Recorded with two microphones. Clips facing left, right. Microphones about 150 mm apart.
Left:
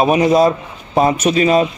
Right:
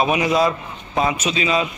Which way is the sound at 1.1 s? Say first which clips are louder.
Left 8 dB; 55° left (ahead or behind).